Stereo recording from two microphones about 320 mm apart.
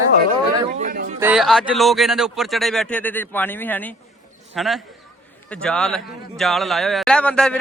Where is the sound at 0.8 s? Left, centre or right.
Right.